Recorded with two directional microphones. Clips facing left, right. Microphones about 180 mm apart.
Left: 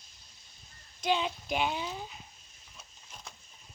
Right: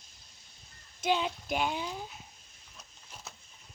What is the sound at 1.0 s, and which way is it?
Speech, 5° right (ahead or behind).